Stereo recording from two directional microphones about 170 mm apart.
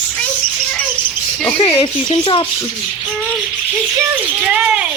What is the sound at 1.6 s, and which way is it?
Speech, 25° left (ahead or behind).